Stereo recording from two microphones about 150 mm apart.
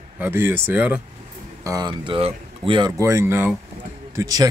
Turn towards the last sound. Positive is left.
turn(degrees=-25)  # may be behind; listen again after turning